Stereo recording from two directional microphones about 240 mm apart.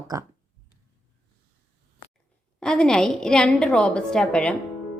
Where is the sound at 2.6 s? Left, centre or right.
Centre.